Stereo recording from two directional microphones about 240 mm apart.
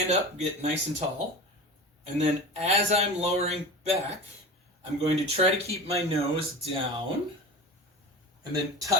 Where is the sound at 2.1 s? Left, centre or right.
Right.